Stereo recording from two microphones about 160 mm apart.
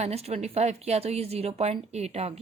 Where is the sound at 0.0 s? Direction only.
40° right (ahead or behind).